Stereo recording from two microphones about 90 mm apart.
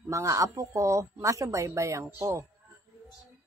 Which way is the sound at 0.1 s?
35° right (ahead or behind).